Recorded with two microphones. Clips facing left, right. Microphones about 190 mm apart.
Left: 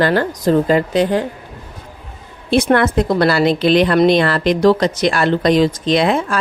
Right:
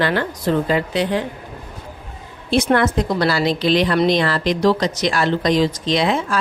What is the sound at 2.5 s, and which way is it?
A woman's voice, 55° left (ahead or behind).